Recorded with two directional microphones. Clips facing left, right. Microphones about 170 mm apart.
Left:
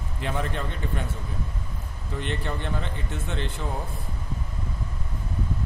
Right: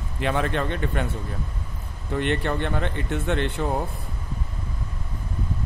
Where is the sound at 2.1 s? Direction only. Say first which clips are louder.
Right 7 dB; 65° right (ahead or behind).